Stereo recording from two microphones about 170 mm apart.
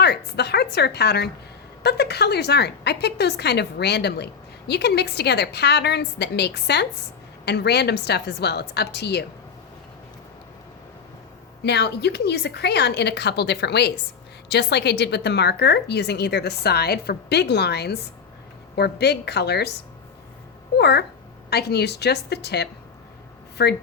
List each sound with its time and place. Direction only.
0.0 s a woman's voice: 75° left (ahead or behind)
11.6 s a woman's voice: 80° left
20.7 s a woman's voice: 75° left (ahead or behind)